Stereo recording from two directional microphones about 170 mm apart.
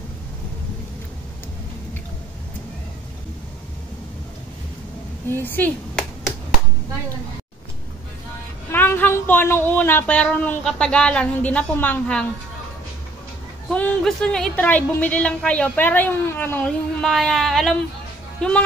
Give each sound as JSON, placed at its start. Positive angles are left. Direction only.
{"t": 5.4, "sound": "speech", "side_deg": 10}
{"t": 8.7, "sound": "speech", "side_deg": 10}
{"t": 13.7, "sound": "a woman's voice", "side_deg": 5}